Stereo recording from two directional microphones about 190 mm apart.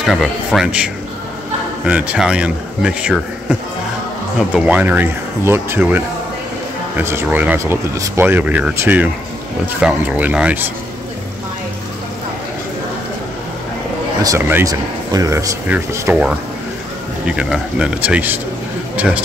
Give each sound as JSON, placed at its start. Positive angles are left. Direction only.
{"t": 0.0, "sound": "speech", "side_deg": 0}
{"t": 1.9, "sound": "speech", "side_deg": -5}
{"t": 4.6, "sound": "speech", "side_deg": -10}
{"t": 14.2, "sound": "speech", "side_deg": -15}